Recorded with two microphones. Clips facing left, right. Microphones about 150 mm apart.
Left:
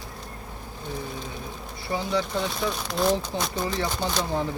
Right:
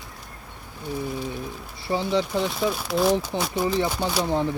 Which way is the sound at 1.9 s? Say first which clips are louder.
Right 3 dB; 25° right (ahead or behind).